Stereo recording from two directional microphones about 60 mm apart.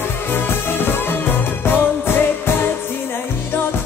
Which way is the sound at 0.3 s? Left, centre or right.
Left.